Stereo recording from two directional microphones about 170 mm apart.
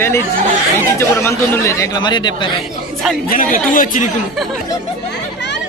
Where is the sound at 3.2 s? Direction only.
55° left (ahead or behind).